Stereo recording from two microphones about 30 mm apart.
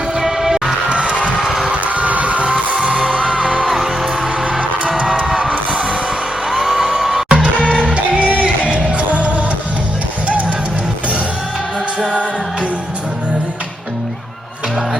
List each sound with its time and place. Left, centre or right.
0.2 s music: centre
0.9 s children shouting: right
1.8 s music: right
4.9 s music: right
6.5 s music: centre
7.6 s music: left
7.9 s music: right
8.6 s music: right